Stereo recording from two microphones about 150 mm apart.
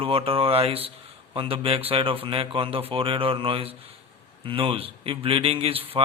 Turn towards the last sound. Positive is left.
turn(degrees=-40)  # may be behind; listen again after turning